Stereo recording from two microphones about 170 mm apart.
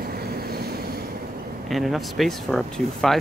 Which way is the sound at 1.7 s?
Centre (ahead or behind).